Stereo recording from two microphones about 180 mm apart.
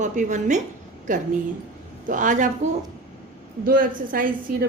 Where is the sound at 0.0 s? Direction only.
40° right (ahead or behind).